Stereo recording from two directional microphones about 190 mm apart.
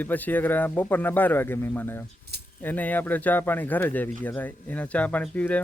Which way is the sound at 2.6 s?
10° left (ahead or behind).